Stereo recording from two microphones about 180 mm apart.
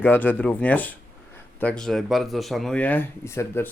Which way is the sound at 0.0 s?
10° left (ahead or behind).